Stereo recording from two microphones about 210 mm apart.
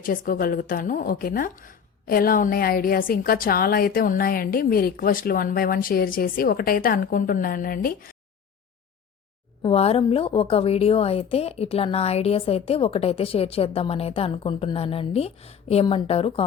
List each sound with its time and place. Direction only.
0.0 s a woman's voice: 40° left (ahead or behind)
9.6 s a woman's voice: 30° left (ahead or behind)